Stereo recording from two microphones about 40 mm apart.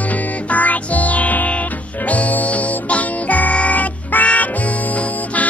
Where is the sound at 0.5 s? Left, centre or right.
Left.